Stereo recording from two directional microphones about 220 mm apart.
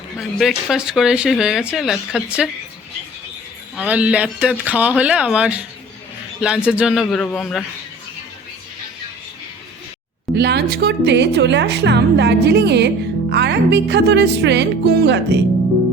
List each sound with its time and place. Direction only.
0.2 s speech: centre (ahead or behind)
3.8 s speech: 5° right (ahead or behind)
10.3 s speech: 50° right (ahead or behind)